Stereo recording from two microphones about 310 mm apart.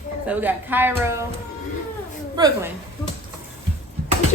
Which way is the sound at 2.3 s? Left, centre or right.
Centre.